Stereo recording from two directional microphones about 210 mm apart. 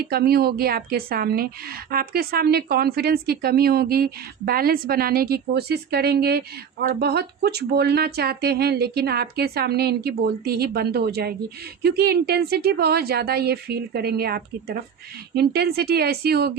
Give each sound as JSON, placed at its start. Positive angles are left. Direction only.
{"t": 0.0, "sound": "speech", "side_deg": -50}